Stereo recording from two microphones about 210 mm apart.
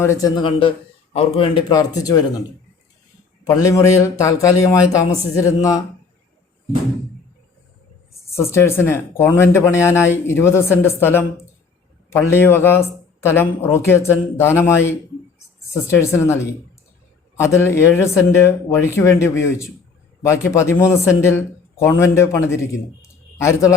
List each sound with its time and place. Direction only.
0.0 s a man's voice: 15° left (ahead or behind)
3.4 s a man's voice: 15° left (ahead or behind)
8.4 s a man's voice: 15° left (ahead or behind)